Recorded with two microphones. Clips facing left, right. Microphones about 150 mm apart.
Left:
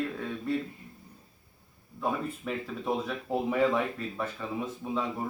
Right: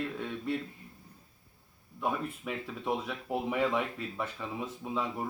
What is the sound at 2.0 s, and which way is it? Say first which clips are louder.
Speech: left 2 dB; 5° right (ahead or behind).